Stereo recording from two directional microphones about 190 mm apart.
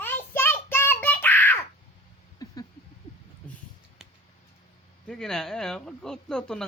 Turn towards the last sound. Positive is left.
turn(degrees=5)  # may be behind; listen again after turning